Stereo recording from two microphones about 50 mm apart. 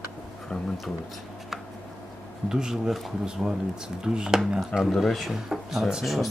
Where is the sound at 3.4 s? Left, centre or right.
Centre.